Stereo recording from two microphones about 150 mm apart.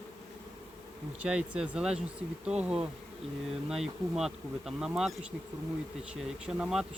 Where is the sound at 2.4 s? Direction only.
5° right (ahead or behind).